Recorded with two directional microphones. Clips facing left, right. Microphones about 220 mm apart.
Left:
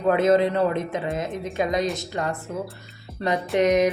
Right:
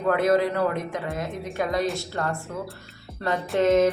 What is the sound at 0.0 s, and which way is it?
A man's voice, 20° left (ahead or behind).